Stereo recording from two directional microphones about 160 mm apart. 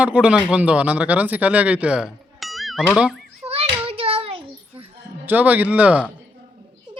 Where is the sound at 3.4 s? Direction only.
40° right (ahead or behind).